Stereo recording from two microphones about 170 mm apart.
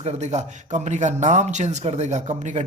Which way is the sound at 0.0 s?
40° right (ahead or behind).